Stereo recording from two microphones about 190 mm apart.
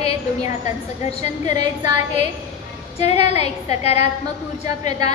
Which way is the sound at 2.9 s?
35° left (ahead or behind).